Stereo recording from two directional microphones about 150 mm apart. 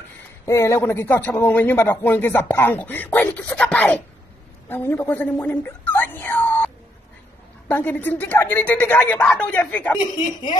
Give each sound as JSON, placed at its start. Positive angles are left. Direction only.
{"t": 0.5, "sound": "a man's voice", "side_deg": 20}
{"t": 9.9, "sound": "speech", "side_deg": 30}